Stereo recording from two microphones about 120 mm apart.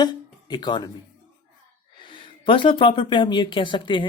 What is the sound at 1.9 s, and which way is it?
Speech, 45° left (ahead or behind).